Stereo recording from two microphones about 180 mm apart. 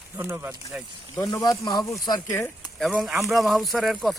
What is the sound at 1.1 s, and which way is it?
Speech, 20° left (ahead or behind).